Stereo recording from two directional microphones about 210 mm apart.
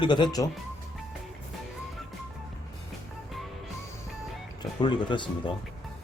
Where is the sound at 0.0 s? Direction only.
20° left (ahead or behind).